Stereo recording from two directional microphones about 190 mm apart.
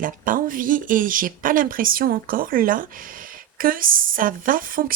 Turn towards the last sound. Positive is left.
turn(degrees=-45)  # may be behind; listen again after turning